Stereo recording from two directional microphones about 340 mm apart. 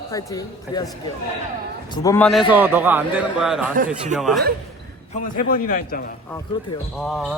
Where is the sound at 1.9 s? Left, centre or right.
Centre.